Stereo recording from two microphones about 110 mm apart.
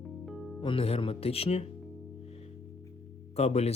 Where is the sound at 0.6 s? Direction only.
55° left (ahead or behind).